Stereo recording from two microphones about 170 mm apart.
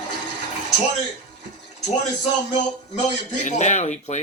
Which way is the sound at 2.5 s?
40° left (ahead or behind).